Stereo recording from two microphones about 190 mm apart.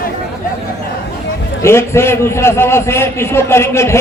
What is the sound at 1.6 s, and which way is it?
A man's voice, 15° left (ahead or behind).